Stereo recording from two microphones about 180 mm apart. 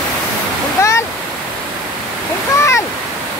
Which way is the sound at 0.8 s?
15° left (ahead or behind).